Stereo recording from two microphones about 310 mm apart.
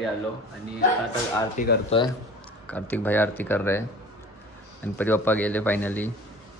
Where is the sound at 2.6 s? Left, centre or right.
Centre.